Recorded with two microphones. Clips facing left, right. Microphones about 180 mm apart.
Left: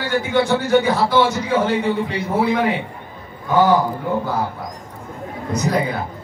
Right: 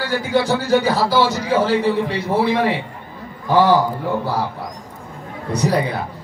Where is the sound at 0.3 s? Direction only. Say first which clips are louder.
Even; 35° right (ahead or behind).